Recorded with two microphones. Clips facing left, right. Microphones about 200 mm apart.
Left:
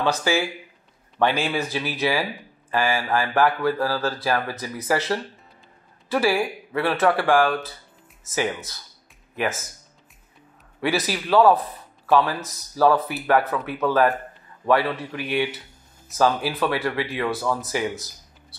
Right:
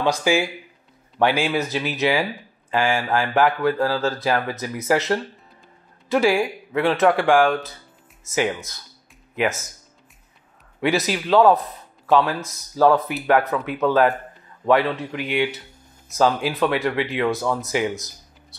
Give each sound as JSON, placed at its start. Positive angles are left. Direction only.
{"t": 0.0, "sound": "speech", "side_deg": -15}
{"t": 10.8, "sound": "speech", "side_deg": -15}